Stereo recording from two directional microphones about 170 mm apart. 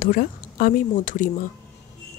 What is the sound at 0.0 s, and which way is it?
Speech, 60° left (ahead or behind).